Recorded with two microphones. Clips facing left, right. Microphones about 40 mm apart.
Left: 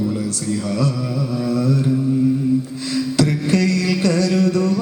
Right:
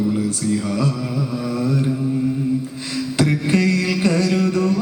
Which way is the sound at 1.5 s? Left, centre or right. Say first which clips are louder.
Left 2 dB; centre.